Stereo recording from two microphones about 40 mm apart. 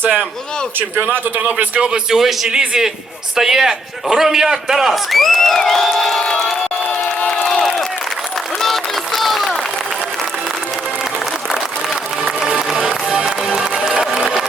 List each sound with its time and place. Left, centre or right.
1.4 s a man's voice: right
1.8 s speech: centre
2.1 s crowd: centre
2.5 s a man's voice: centre
5.1 s crowd: centre
6.2 s crowd: left
8.6 s a sound: centre
12.4 s music: centre
13.9 s a sound: centre